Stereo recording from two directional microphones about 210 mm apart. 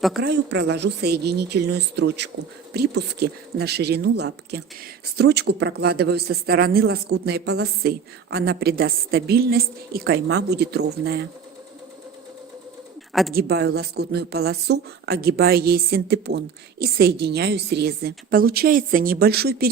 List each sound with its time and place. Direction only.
0.2 s speech: 50° right (ahead or behind)
13.3 s speech: 50° right (ahead or behind)